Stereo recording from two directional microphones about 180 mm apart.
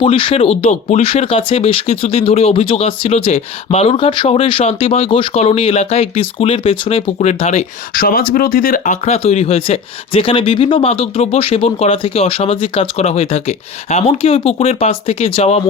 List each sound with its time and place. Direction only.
0.0 s speech: 30° left (ahead or behind)
7.9 s speech: 55° left (ahead or behind); by 15.6 s 35° left (ahead or behind)